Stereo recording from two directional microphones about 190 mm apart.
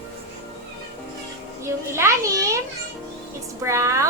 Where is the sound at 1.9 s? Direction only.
15° right (ahead or behind).